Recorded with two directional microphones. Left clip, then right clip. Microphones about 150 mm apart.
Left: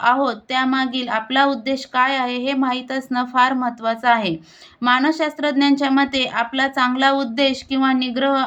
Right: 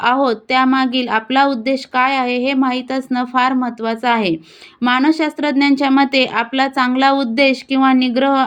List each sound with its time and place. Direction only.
0.0 s speech: 35° right (ahead or behind)